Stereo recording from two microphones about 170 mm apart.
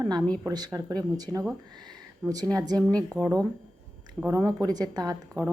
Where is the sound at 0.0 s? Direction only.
25° right (ahead or behind).